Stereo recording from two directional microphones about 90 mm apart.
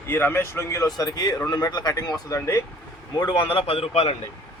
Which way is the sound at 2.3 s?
30° left (ahead or behind).